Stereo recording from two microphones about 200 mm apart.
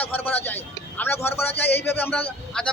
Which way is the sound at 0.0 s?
10° left (ahead or behind).